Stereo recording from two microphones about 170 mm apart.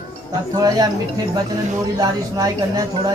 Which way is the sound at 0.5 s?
20° right (ahead or behind).